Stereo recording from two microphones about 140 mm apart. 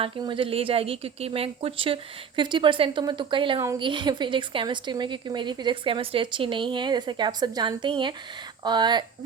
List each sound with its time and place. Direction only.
0.0 s a woman's voice: 35° right (ahead or behind)